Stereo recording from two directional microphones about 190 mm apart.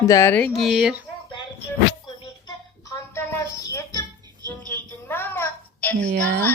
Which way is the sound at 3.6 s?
15° left (ahead or behind).